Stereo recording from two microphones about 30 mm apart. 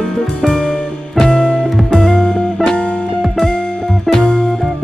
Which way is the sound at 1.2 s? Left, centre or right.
Left.